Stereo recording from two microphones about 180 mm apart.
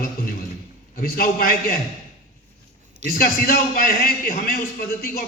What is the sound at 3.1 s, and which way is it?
A man's voice, 55° left (ahead or behind).